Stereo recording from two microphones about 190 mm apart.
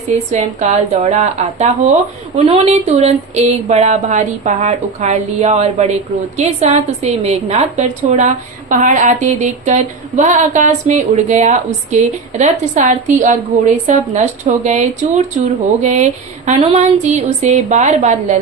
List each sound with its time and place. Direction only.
0.3 s speech: 40° right (ahead or behind)